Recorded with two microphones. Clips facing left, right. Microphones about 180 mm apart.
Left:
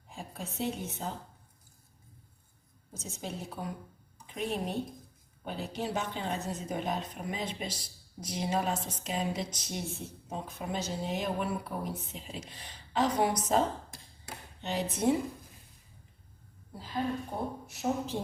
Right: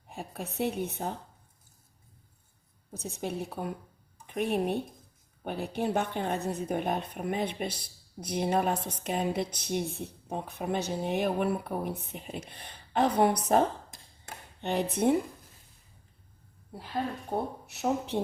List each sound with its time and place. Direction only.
0.1 s a woman's voice: 60° right (ahead or behind)
2.9 s a woman's voice: 60° right (ahead or behind)
14.6 s a woman's voice: 55° right (ahead or behind)
17.3 s a woman's voice: 60° right (ahead or behind)